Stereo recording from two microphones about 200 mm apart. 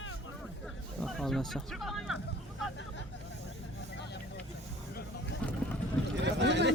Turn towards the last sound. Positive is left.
turn(degrees=-60)  # may be behind; listen again after turning